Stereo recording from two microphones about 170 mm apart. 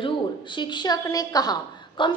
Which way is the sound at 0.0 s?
30° left (ahead or behind).